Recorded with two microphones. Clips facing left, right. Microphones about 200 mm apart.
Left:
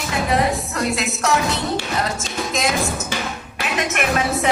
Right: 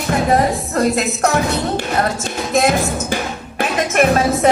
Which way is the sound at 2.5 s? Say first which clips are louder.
Right 7 dB; 60° right (ahead or behind).